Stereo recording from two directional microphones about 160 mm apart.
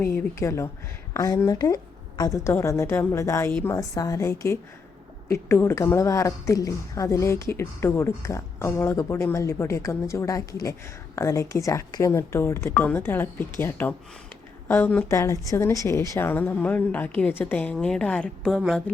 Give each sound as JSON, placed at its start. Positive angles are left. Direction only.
{"t": 0.0, "sound": "a woman's voice", "side_deg": 15}